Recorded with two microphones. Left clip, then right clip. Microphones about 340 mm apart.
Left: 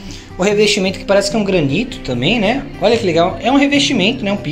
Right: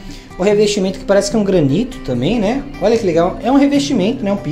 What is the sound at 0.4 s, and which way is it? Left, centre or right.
Speech, centre.